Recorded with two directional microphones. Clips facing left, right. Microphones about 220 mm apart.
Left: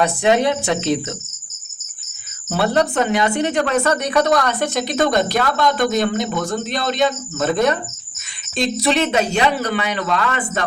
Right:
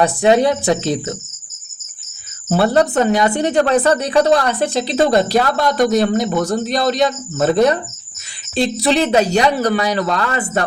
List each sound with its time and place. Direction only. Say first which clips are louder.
0.2 s speech: right 4 dB; 35° right (ahead or behind)
2.5 s speech: right 4 dB; 35° right (ahead or behind)